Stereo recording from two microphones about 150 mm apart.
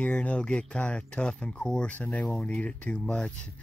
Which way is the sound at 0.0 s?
5° left (ahead or behind).